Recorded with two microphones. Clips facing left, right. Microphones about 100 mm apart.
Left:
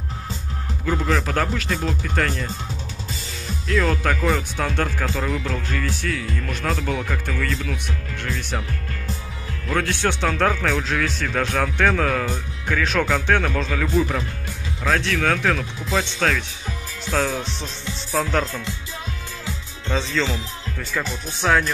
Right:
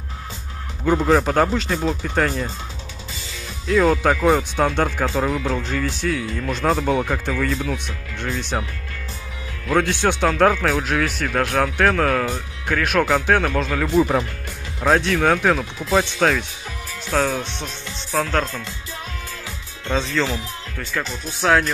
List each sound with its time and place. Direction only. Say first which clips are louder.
0.8 s a man's voice: right 6 dB; 35° right (ahead or behind); by 2.3 s 15° right (ahead or behind)
3.8 s speech: right 6 dB; 15° right (ahead or behind)
9.7 s speech: right 4 dB; 15° right (ahead or behind)
13.8 s speech: right 5 dB; 25° right (ahead or behind)
17.3 s speech: right 2 dB; centre (ahead or behind)
19.9 s speech: right 2 dB; 10° right (ahead or behind)